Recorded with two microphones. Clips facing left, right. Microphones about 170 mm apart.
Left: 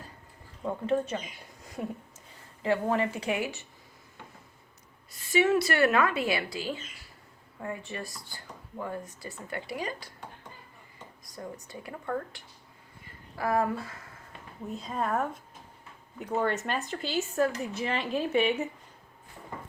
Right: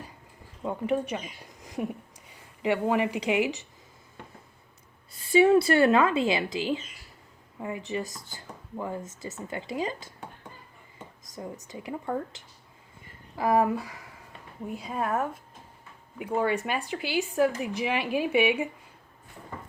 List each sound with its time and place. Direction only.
0.6 s speech: 10° right (ahead or behind)
1.6 s a sound: 15° right (ahead or behind)
2.6 s speech: 15° right (ahead or behind)
5.1 s speech: 30° right (ahead or behind)
11.3 s speech: 20° right (ahead or behind)